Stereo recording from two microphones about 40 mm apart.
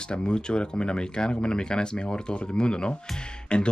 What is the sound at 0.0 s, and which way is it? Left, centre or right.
Speech, left.